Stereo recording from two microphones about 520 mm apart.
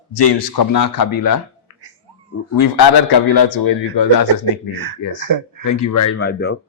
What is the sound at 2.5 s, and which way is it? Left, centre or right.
A man's voice, left.